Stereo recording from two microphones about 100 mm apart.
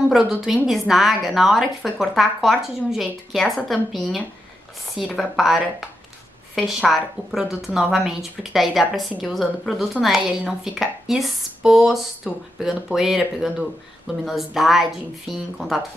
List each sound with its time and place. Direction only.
0.1 s a woman's voice: 5° right (ahead or behind)